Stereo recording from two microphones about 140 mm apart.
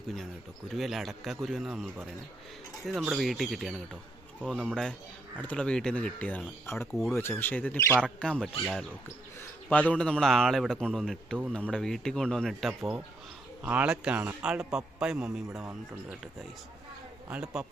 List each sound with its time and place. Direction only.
0.8 s a man's voice: centre (ahead or behind)
9.4 s bird: 10° left (ahead or behind)
9.9 s a man's voice: 5° left (ahead or behind)